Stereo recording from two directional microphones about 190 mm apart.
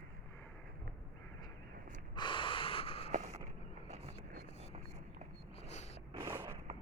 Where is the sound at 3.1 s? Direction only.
40° right (ahead or behind).